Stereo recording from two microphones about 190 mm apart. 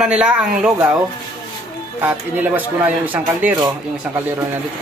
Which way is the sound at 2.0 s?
10° right (ahead or behind).